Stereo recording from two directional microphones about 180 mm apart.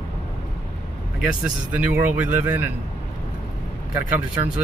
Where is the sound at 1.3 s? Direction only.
10° right (ahead or behind).